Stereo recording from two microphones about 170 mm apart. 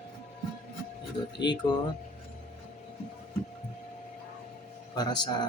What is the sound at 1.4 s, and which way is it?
Speech, 25° left (ahead or behind).